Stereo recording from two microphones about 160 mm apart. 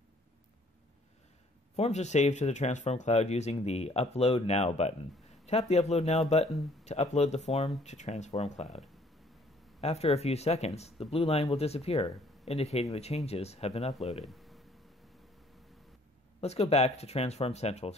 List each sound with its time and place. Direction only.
1.8 s speech: 45° left (ahead or behind)
14.2 s a sound: centre (ahead or behind)
16.3 s speech: 40° left (ahead or behind)